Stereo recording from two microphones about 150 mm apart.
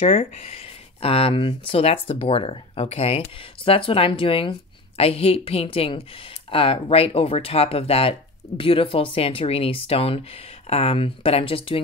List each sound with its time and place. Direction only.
0.0 s speech: 45° left (ahead or behind)